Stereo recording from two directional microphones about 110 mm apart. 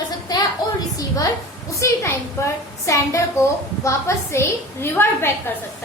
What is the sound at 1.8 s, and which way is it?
A woman's voice, 25° left (ahead or behind).